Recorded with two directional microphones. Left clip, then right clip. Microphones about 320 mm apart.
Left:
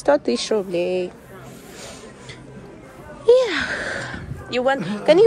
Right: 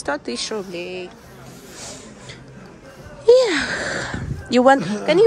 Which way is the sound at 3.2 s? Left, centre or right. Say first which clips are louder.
Right 2 dB; centre.